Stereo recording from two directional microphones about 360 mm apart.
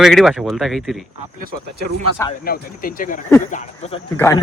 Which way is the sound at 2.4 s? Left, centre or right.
Left.